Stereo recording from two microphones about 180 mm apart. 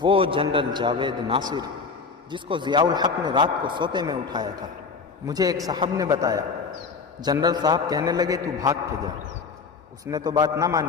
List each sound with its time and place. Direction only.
0.0 s a man's voice: 30° right (ahead or behind)
10.1 s a man's voice: 20° right (ahead or behind)